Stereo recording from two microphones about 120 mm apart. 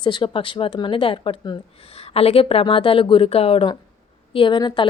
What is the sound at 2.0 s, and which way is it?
Speech, 55° left (ahead or behind).